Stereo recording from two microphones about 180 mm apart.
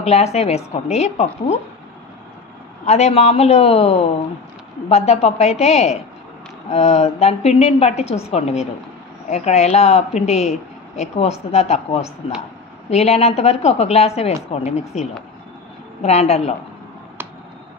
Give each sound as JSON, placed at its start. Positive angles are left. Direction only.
{"t": 0.0, "sound": "speech", "side_deg": 35}
{"t": 2.8, "sound": "speech", "side_deg": 35}